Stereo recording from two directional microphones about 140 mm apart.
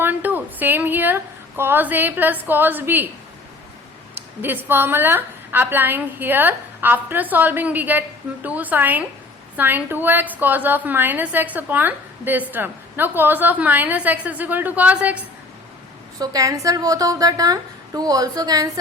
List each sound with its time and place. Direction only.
0.0 s a sound: 10° right (ahead or behind)
4.4 s a woman's voice: 15° right (ahead or behind)
16.1 s a woman's voice: 25° right (ahead or behind)